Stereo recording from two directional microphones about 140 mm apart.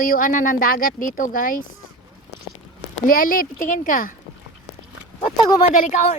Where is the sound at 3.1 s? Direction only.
90° left; by 4.1 s 75° left (ahead or behind).